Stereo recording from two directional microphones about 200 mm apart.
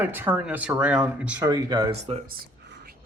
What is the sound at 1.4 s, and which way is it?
Speech, 20° right (ahead or behind).